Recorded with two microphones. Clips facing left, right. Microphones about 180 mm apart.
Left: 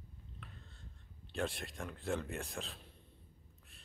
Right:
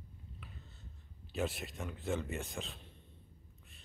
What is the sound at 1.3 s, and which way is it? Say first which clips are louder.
Speech: right 2 dB; 5° right (ahead or behind).